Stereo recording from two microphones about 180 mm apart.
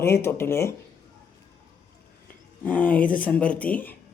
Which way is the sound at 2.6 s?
10° left (ahead or behind).